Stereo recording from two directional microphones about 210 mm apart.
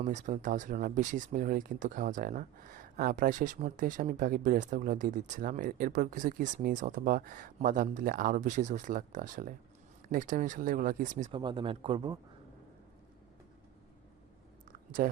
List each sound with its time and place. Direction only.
0.0 s speech: 35° right (ahead or behind)
11.3 s speech: 25° right (ahead or behind)
15.0 s speech: 40° right (ahead or behind)